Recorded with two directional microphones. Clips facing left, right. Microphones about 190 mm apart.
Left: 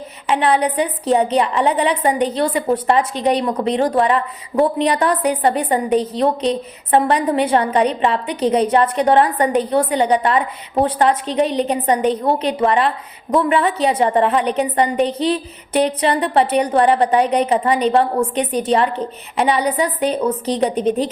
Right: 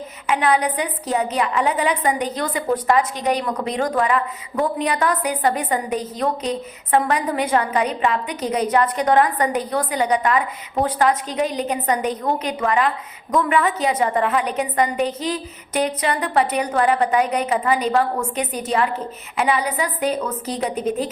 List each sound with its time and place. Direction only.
0.3 s a woman's voice: 30° left (ahead or behind)